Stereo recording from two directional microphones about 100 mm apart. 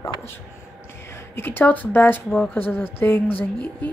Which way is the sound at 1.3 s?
20° left (ahead or behind).